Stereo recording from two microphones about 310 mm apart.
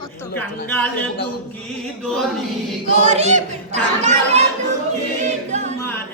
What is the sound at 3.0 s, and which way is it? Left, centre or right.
Speech, right.